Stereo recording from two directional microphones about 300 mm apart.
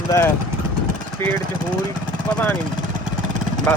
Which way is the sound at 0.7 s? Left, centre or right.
Right.